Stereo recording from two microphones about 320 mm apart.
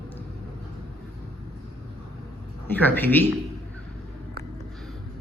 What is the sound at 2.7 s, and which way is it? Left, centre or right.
Speech, centre.